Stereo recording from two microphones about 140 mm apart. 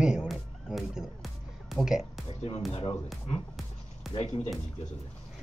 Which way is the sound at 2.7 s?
40° left (ahead or behind).